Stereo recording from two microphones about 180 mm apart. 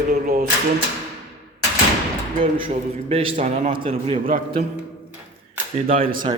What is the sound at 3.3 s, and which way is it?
Speech, 45° right (ahead or behind).